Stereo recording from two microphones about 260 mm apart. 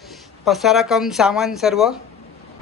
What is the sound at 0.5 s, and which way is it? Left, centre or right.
A woman's voice, centre.